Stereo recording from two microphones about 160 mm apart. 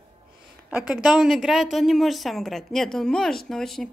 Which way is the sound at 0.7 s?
10° right (ahead or behind).